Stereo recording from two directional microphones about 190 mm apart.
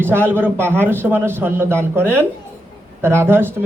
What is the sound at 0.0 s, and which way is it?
A man's voice, 10° right (ahead or behind).